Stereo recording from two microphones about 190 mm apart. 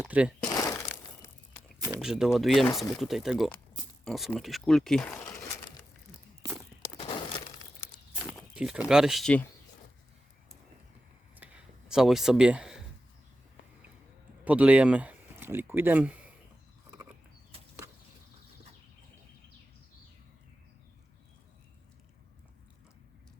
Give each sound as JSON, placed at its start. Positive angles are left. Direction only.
{"t": 0.1, "sound": "speech", "side_deg": -5}
{"t": 0.4, "sound": "crumpling", "side_deg": 20}
{"t": 1.9, "sound": "speech", "side_deg": -5}
{"t": 7.0, "sound": "a sound", "side_deg": 25}
{"t": 8.5, "sound": "speech", "side_deg": -5}
{"t": 11.3, "sound": "a sound", "side_deg": -5}
{"t": 14.4, "sound": "speech", "side_deg": -5}